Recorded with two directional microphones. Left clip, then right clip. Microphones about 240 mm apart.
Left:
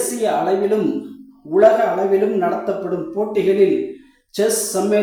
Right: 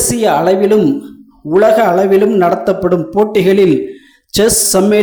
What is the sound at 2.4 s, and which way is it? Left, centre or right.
Speech, right.